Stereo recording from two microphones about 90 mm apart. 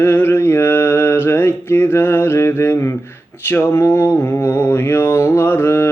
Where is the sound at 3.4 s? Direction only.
25° left (ahead or behind).